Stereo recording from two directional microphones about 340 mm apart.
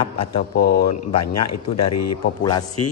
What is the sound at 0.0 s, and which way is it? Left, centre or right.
Speech, left.